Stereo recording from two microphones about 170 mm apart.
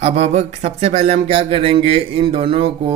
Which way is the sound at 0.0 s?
40° right (ahead or behind).